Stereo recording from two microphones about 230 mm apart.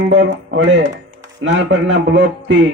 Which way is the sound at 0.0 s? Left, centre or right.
Right.